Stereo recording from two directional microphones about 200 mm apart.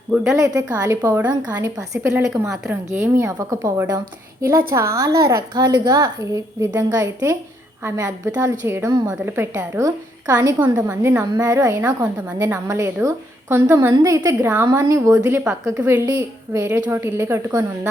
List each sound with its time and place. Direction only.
0.3 s a woman's voice: 15° right (ahead or behind)